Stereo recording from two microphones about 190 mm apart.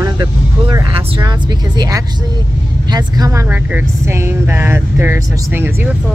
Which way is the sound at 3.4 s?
10° right (ahead or behind).